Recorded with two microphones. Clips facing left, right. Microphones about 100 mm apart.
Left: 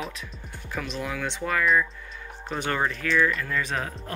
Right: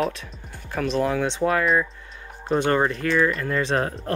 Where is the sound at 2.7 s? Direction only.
35° right (ahead or behind).